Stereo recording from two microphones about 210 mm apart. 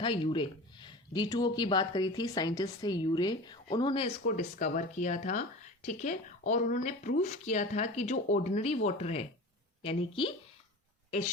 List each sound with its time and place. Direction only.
0.0 s speech: 25° left (ahead or behind)
4.4 s speech: 35° left (ahead or behind)